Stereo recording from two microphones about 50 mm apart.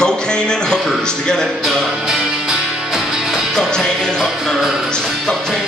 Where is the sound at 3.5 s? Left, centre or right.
Centre.